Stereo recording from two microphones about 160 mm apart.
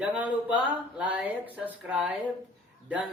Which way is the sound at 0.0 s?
10° right (ahead or behind).